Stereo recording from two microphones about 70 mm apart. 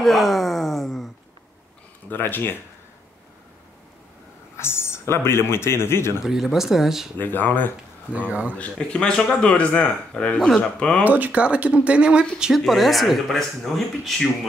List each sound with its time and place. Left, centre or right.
0.0 s wail: centre
2.0 s speech: left
4.6 s a man's voice: left
6.2 s speech: centre
7.2 s speech: left
8.3 s speech: right
8.5 s speech: centre
11.1 s speech: right; by 14.5 s centre